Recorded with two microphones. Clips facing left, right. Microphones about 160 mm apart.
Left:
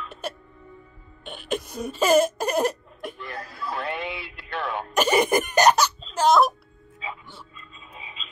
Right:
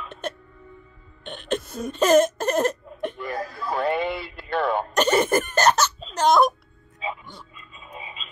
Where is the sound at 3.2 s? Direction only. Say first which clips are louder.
Right 5 dB; 45° right (ahead or behind).